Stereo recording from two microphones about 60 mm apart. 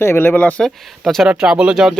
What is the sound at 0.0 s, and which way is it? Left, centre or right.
Speech, left.